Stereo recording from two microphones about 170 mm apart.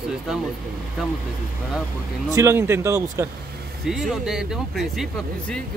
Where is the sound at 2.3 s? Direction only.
15° right (ahead or behind).